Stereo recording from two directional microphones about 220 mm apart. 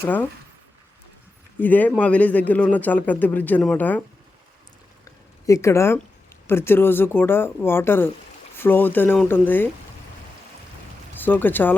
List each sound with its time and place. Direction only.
0.0 s a man's voice: 5° left (ahead or behind)
1.5 s a man's voice: 10° left (ahead or behind)
5.5 s a man's voice: 15° left (ahead or behind)
11.3 s a man's voice: 10° left (ahead or behind)